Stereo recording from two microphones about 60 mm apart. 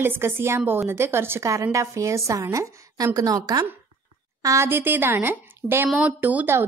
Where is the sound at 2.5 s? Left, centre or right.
Right.